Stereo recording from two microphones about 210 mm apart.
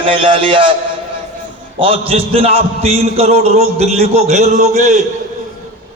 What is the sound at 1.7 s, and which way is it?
A man's voice, 25° right (ahead or behind).